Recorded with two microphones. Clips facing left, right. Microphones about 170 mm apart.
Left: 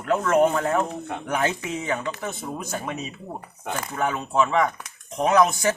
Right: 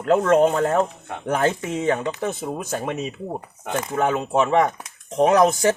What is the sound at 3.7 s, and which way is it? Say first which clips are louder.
Speech: right 5 dB; 25° right (ahead or behind).